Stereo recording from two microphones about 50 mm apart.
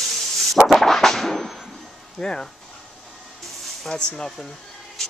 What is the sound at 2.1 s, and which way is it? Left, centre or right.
Speech, centre.